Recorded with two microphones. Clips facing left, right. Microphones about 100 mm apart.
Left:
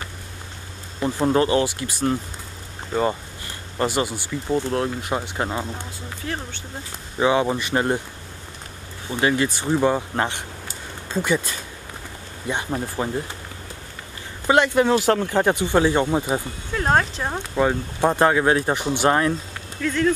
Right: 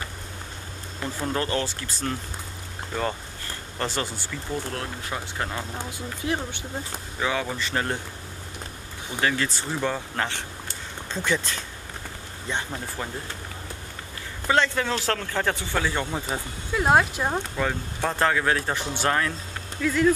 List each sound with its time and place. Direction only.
1.0 s speech: 25° left (ahead or behind)
1.4 s speech: 10° left (ahead or behind)
5.8 s speech: 15° right (ahead or behind)
7.2 s speech: 20° left (ahead or behind)
9.2 s speech: 15° left (ahead or behind)
11.1 s speech: 10° left (ahead or behind)
14.5 s speech: 15° left (ahead or behind)
16.7 s speech: 10° right (ahead or behind)
17.6 s speech: 20° left (ahead or behind)
19.8 s speech: 5° right (ahead or behind)